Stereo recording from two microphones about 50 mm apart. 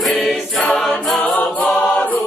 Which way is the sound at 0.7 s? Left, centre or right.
Centre.